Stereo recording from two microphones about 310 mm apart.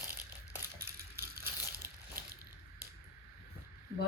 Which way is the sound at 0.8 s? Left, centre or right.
Right.